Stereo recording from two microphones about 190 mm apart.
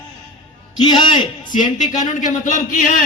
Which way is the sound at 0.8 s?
25° left (ahead or behind).